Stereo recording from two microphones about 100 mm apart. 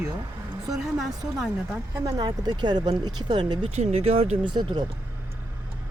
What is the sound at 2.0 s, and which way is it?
Speech, 40° right (ahead or behind).